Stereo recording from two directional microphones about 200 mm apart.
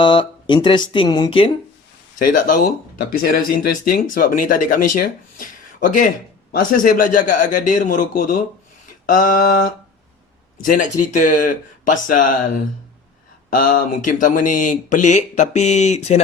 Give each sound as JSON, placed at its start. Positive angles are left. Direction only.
{"t": 0.0, "sound": "speech", "side_deg": 25}
{"t": 2.1, "sound": "speech", "side_deg": 40}
{"t": 13.5, "sound": "speech", "side_deg": 45}